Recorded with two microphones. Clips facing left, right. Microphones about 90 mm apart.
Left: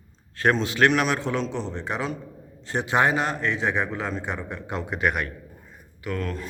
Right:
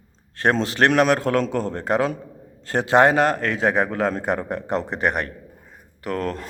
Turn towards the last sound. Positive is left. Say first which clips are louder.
# right 4 dB
turn(degrees=-45)  # may be behind; listen again after turning